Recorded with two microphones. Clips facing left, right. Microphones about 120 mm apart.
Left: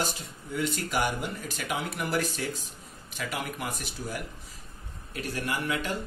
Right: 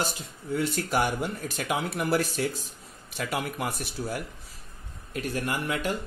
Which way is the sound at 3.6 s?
50° left (ahead or behind).